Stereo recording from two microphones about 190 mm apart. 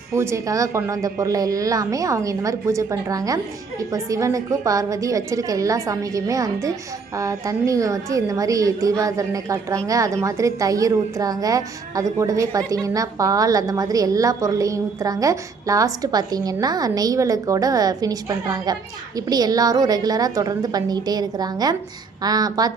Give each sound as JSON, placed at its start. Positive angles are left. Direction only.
{"t": 0.1, "sound": "a woman's voice", "side_deg": -15}